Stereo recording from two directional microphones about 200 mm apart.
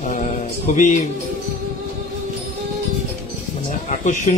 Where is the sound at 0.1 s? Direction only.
35° left (ahead or behind).